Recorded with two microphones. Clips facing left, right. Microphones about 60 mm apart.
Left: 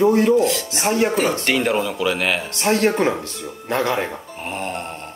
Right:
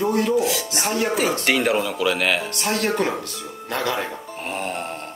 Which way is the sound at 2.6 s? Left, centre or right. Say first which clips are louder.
Left 4 dB; left.